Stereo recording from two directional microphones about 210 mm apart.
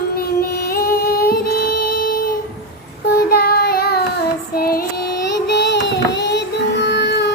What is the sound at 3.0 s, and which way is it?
Child singing, 50° left (ahead or behind).